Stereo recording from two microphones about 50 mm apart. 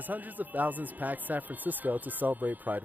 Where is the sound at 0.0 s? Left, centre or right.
Right.